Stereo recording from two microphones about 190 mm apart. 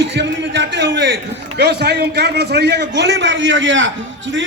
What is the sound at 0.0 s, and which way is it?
A man's voice, 65° right (ahead or behind).